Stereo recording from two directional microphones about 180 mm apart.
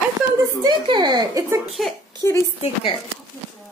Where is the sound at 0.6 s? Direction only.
25° right (ahead or behind).